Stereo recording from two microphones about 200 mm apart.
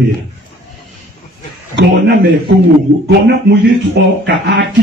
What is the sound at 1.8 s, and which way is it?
Speech, 55° right (ahead or behind).